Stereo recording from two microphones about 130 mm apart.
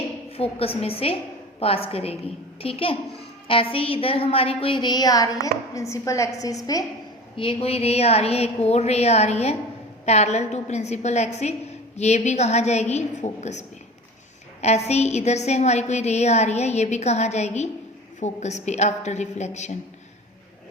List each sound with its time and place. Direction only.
0.3 s a woman's voice: 50° left (ahead or behind); by 6.8 s 25° left (ahead or behind)
7.3 s a woman's voice: 45° left (ahead or behind); by 19.7 s 65° left (ahead or behind)